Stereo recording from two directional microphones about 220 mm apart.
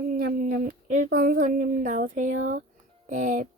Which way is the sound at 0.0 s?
45° right (ahead or behind).